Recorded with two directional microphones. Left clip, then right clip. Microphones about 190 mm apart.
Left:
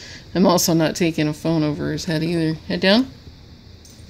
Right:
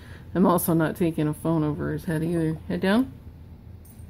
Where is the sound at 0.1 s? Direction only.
15° left (ahead or behind).